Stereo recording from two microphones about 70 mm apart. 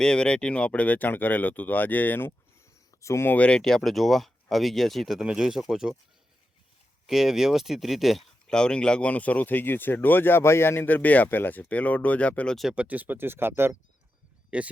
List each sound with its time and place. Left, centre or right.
0.0 s speech: centre; by 2.6 s left
3.0 s speech: left
3.2 s speech: centre
3.6 s speech: centre
7.1 s speech: centre
8.4 s speech: centre
12.7 s speech: centre
14.5 s speech: centre